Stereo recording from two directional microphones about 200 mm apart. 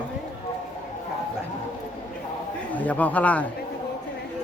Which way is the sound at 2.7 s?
10° left (ahead or behind).